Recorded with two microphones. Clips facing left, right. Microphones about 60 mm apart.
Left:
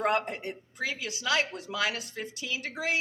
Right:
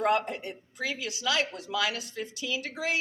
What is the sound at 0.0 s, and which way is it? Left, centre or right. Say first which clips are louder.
A woman's voice: right 1 dB; left.